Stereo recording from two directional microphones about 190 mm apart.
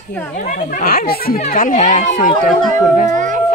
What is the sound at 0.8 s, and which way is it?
Speech, 50° left (ahead or behind).